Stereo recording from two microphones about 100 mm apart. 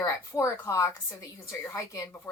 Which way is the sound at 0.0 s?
25° left (ahead or behind).